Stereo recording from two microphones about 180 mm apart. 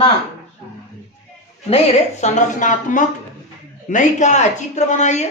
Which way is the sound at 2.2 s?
45° left (ahead or behind).